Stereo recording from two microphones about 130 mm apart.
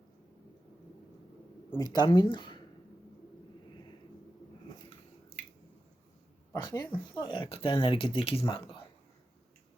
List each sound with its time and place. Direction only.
1.7 s speech: 30° left (ahead or behind)
6.5 s a sound: 30° left (ahead or behind)
7.2 s speech: 40° left (ahead or behind)